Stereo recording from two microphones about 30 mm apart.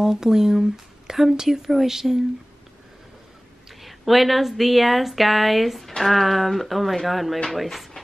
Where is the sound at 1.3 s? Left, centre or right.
Centre.